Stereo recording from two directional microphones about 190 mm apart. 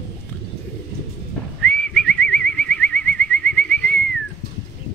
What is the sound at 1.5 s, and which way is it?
Bird, 5° left (ahead or behind).